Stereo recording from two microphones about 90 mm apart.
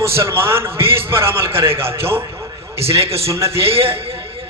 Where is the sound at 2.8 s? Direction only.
90° right.